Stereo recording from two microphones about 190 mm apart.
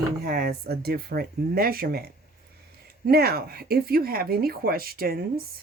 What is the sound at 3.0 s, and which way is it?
Speech, 55° right (ahead or behind).